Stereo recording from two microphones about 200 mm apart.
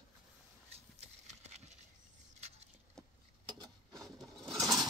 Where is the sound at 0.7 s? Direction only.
35° right (ahead or behind).